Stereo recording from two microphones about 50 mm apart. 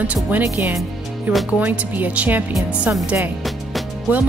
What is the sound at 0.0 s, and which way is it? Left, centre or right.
Speech, right.